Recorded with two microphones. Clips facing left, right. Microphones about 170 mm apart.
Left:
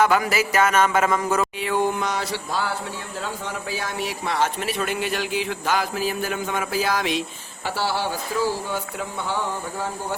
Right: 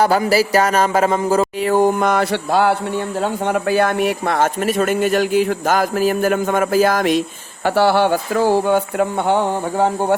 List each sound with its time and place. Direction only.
0.0 s music: 35° right (ahead or behind); by 2.7 s 60° right (ahead or behind)
3.2 s speech: 60° right (ahead or behind)